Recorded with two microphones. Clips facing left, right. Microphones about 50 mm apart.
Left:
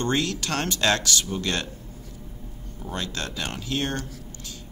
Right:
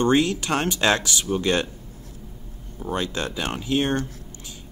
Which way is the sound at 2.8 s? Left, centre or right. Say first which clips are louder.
Right 5 dB; centre.